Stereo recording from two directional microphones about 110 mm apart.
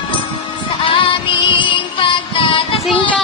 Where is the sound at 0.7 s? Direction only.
50° left (ahead or behind).